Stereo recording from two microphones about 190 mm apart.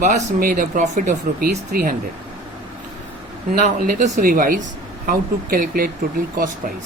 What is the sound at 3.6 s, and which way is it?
Speech, 45° right (ahead or behind).